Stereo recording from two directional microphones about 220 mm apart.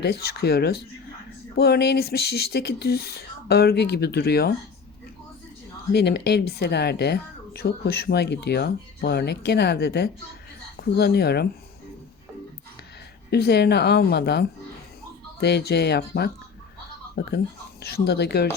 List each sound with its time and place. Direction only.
0.0 s a woman's voice: 45° left (ahead or behind)
5.9 s a woman's voice: 50° left (ahead or behind)
13.3 s a woman's voice: 50° left (ahead or behind)